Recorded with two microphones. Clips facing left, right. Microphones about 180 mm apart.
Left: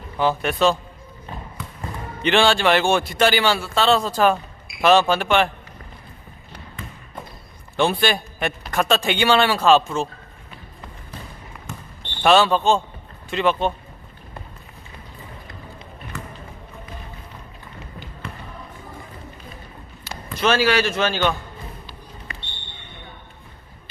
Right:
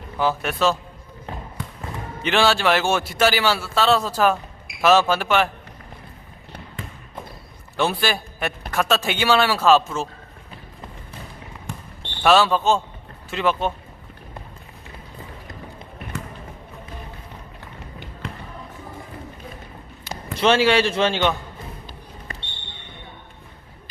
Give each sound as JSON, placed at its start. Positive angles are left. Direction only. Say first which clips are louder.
{"t": 0.2, "sound": "a man's voice", "louder": "left 2 dB", "side_deg": -5}
{"t": 2.2, "sound": "a man's voice", "louder": "left 2 dB", "side_deg": -5}
{"t": 7.8, "sound": "a man's voice", "louder": "left 2 dB", "side_deg": -5}
{"t": 12.2, "sound": "a man's voice", "louder": "left 1 dB", "side_deg": 0}
{"t": 20.1, "sound": "speech", "louder": "right 2 dB", "side_deg": -25}